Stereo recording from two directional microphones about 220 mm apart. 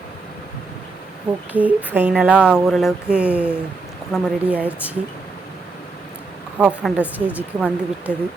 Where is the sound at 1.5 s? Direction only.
5° right (ahead or behind).